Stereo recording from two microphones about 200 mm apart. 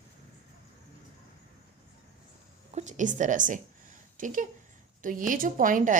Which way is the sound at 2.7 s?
35° right (ahead or behind).